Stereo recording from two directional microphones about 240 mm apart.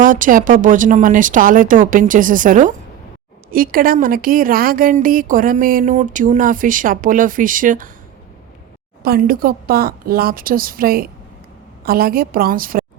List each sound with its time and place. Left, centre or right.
0.0 s a woman's voice: right
9.0 s a woman's voice: right